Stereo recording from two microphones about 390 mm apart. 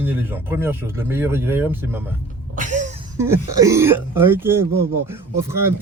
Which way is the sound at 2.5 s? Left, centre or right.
Centre.